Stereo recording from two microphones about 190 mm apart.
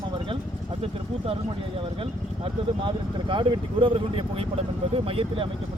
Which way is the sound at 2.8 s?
25° right (ahead or behind).